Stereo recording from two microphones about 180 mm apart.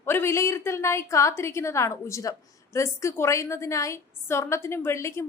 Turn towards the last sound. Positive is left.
turn(degrees=15)  # may be behind; listen again after turning